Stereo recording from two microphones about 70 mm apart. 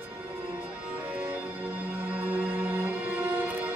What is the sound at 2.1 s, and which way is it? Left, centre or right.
Music, right.